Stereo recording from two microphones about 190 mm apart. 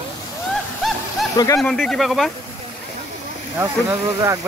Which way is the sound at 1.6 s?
Centre (ahead or behind).